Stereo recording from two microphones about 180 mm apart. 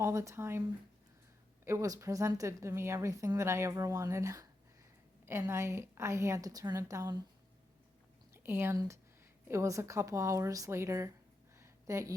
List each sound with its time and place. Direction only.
0.0 s a woman's voice: 15° right (ahead or behind)
8.3 s a woman's voice: 10° right (ahead or behind)
11.5 s a sound: 15° right (ahead or behind)